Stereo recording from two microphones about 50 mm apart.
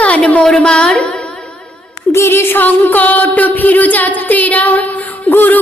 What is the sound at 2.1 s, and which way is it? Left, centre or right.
Music, left.